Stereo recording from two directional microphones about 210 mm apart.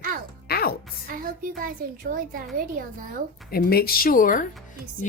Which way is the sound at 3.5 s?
45° left (ahead or behind).